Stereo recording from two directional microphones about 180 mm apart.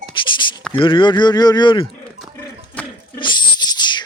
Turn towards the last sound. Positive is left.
turn(degrees=25)  # may be behind; listen again after turning